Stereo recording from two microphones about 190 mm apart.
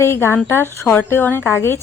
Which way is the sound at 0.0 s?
15° left (ahead or behind).